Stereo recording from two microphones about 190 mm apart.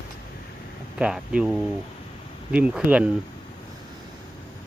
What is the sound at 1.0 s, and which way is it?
Speech, 5° right (ahead or behind).